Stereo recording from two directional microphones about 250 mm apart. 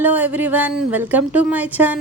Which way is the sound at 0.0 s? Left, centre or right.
Centre.